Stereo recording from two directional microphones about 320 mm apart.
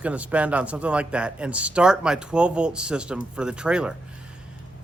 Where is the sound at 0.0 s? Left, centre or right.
Centre.